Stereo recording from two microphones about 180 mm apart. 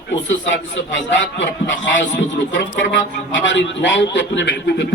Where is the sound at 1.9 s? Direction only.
90° left.